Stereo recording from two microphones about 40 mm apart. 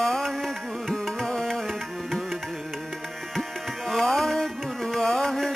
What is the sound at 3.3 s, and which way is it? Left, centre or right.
Music, centre.